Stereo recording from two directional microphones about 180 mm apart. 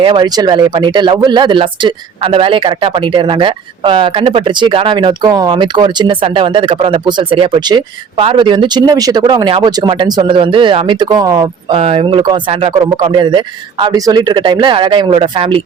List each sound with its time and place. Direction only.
0.0 s speech: 25° right (ahead or behind)